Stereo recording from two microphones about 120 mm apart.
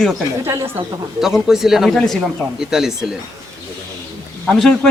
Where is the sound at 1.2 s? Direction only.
5° right (ahead or behind).